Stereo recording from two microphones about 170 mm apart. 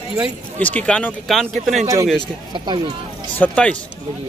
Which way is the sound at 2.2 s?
25° right (ahead or behind).